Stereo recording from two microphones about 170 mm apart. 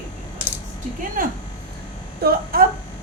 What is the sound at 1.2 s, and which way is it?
Speech, 55° right (ahead or behind).